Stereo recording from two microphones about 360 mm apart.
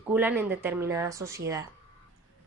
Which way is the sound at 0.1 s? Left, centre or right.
Centre.